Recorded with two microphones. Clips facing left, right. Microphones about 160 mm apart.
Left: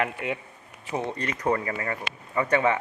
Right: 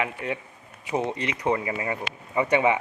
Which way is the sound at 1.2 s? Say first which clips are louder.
Right 1 dB; 10° right (ahead or behind).